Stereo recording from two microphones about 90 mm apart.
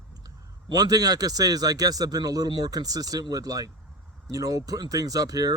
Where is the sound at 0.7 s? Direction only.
45° right (ahead or behind).